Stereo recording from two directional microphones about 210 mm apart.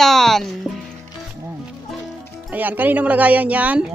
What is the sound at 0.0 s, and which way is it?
Music, centre (ahead or behind).